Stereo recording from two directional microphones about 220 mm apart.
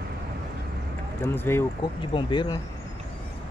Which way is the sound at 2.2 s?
20° left (ahead or behind).